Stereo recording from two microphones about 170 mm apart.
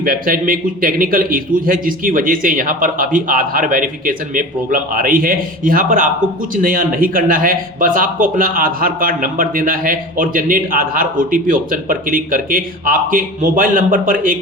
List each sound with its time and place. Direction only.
0.0 s speech: 55° right (ahead or behind)